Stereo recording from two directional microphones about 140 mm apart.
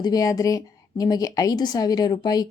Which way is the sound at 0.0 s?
25° left (ahead or behind).